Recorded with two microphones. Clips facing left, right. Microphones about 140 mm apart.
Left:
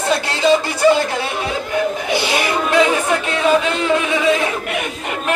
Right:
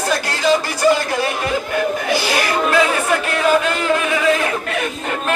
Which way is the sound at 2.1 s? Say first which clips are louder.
Left 1 dB; 25° left (ahead or behind).